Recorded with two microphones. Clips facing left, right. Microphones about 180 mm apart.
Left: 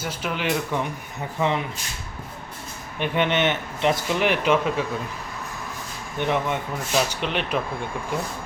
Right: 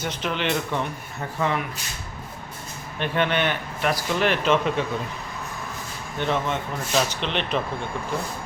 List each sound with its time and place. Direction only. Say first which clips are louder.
0.0 s speech: right 1 dB; 10° left (ahead or behind)
1.4 s speech: left 1 dB; 20° left (ahead or behind)
3.0 s speech: left 1 dB; 20° left (ahead or behind)
6.1 s speech: left 1 dB; 15° left (ahead or behind)